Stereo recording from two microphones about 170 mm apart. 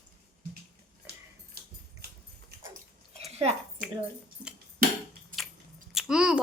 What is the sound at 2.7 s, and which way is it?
Bathtub, 40° right (ahead or behind).